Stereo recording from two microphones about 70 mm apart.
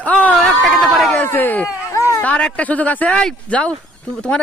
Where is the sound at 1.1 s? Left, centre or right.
Left.